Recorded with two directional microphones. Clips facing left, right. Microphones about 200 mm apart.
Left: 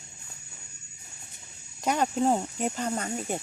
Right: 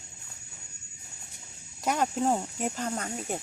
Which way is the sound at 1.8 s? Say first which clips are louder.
Left 2 dB; centre (ahead or behind).